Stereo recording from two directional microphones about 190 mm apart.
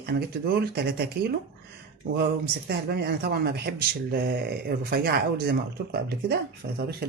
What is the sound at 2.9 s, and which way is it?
Speech, 55° right (ahead or behind).